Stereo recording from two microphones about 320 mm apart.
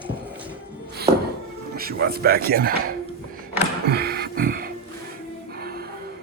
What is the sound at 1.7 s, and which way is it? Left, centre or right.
Speech, right.